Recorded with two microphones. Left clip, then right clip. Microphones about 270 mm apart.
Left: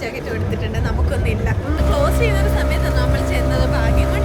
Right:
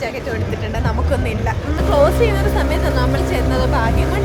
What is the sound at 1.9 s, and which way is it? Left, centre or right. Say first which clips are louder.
Speech: right 5 dB; centre.